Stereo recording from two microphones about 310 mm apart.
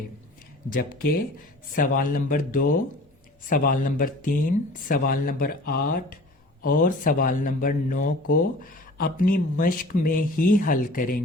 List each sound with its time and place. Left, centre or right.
0.7 s speech: left